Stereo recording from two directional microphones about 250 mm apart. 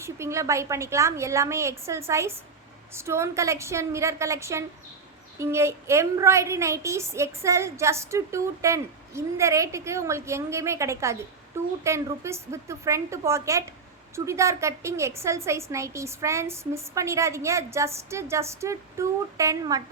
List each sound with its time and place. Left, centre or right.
0.0 s a woman's voice: centre